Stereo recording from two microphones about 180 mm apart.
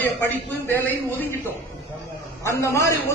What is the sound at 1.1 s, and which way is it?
Speech, 10° left (ahead or behind).